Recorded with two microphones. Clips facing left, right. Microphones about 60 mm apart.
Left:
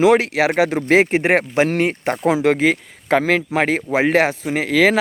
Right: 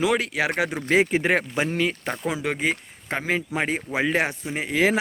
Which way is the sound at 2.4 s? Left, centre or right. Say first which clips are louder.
Left 9 dB; left.